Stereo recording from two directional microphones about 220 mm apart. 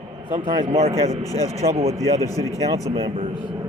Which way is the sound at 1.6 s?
30° right (ahead or behind).